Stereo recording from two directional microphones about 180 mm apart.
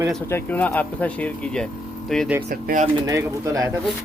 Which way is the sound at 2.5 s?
50° right (ahead or behind).